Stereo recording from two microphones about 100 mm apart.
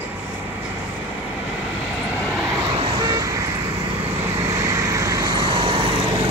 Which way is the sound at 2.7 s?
55° right (ahead or behind).